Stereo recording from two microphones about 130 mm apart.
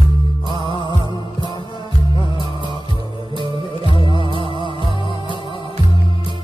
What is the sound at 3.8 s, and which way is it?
Music, 40° left (ahead or behind).